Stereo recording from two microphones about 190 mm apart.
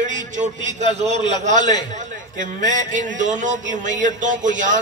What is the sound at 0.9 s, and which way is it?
A man's voice, 35° right (ahead or behind).